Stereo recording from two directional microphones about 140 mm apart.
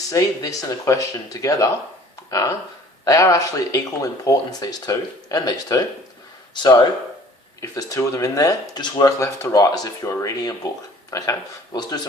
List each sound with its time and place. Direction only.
0.1 s speech: 25° left (ahead or behind)
3.0 s speech: 25° left (ahead or behind)